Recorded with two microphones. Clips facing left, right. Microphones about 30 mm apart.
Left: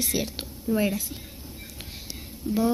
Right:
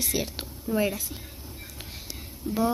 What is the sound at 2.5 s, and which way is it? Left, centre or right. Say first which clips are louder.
Speech: left 3 dB; left.